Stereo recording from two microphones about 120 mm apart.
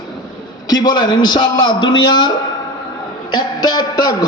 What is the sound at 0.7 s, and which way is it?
A man's voice, 35° left (ahead or behind).